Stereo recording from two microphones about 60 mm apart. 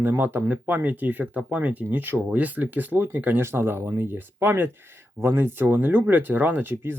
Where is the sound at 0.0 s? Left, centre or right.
Right.